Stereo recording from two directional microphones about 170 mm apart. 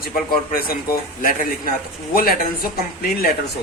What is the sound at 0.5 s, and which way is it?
Speech, 60° left (ahead or behind).